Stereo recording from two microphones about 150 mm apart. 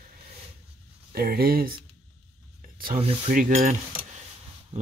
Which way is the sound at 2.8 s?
60° right (ahead or behind).